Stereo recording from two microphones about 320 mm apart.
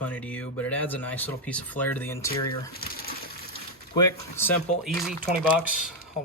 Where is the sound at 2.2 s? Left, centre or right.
Left.